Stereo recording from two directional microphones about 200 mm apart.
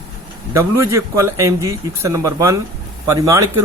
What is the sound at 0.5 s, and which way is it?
Speech, 15° right (ahead or behind).